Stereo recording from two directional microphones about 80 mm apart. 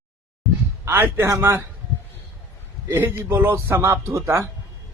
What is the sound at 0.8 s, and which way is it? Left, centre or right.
Speech, right.